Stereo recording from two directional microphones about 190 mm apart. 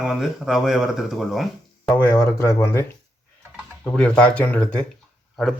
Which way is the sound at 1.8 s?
15° left (ahead or behind).